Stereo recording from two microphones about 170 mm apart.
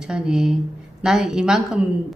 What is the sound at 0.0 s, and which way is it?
A woman's voice, 5° right (ahead or behind).